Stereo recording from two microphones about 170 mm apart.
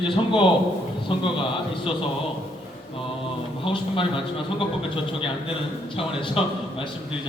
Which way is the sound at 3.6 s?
30° left (ahead or behind).